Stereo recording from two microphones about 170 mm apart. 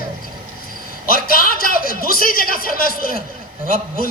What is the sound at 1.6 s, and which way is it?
Speech, 55° left (ahead or behind).